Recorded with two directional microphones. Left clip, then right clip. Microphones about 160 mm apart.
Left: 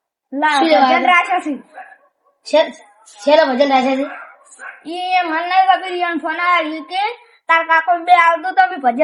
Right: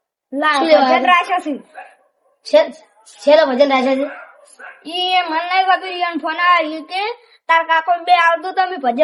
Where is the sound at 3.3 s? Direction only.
15° right (ahead or behind).